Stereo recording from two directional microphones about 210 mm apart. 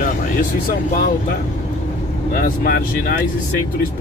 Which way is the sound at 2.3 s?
45° left (ahead or behind).